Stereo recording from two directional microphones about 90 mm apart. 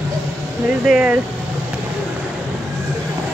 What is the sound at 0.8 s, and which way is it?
Speech, 10° right (ahead or behind).